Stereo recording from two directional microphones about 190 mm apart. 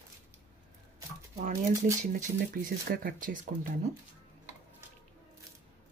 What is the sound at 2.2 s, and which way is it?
Speech, 50° right (ahead or behind).